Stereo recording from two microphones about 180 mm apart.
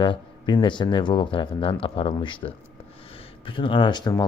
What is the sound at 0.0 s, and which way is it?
Speech, 25° left (ahead or behind).